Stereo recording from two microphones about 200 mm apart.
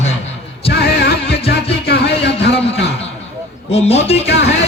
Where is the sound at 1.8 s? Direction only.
55° left (ahead or behind).